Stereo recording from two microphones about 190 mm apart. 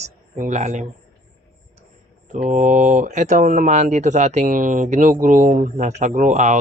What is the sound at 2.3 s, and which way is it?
Speech, 45° right (ahead or behind).